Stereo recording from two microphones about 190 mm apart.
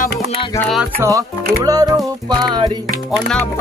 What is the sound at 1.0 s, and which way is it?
Speech, 20° right (ahead or behind).